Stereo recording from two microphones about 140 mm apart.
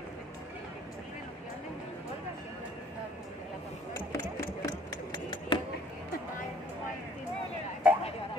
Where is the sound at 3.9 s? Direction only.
25° left (ahead or behind).